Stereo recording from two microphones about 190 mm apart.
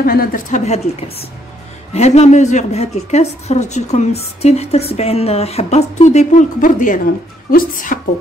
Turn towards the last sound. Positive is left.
turn(degrees=45)  # may be behind; listen again after turning